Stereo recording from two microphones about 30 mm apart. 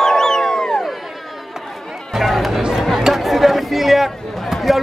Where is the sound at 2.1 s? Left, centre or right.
Centre.